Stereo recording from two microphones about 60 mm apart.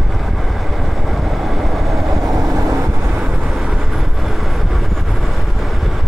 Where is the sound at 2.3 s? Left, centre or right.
Right.